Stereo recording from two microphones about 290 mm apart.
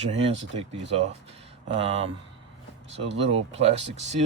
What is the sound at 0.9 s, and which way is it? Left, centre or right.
Speech, right.